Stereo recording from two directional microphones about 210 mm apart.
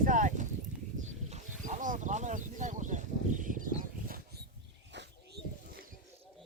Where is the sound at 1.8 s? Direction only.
35° right (ahead or behind).